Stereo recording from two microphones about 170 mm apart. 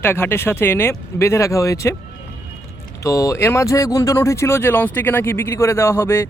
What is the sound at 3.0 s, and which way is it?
Speech, 20° left (ahead or behind).